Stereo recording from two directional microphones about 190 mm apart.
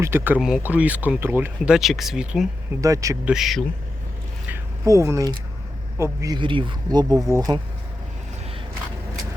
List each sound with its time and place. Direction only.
0.0 s speech: 10° right (ahead or behind)
2.8 s speech: 15° right (ahead or behind)
3.2 s speech: centre (ahead or behind)
4.4 s a sound: 15° right (ahead or behind)
6.0 s speech: 15° right (ahead or behind)